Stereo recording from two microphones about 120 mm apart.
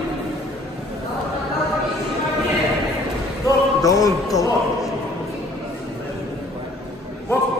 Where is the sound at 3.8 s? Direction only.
30° left (ahead or behind).